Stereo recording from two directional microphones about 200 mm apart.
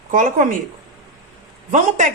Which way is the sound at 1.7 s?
40° right (ahead or behind).